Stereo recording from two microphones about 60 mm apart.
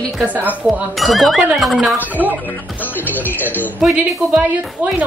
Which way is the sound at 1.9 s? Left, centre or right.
Right.